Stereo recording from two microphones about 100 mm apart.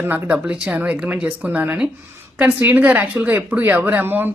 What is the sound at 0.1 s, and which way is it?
Speech, 20° right (ahead or behind).